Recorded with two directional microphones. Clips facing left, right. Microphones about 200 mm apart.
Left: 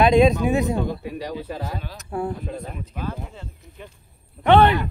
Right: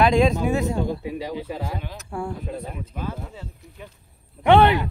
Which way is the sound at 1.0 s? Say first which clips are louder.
Right 1 dB; 20° right (ahead or behind).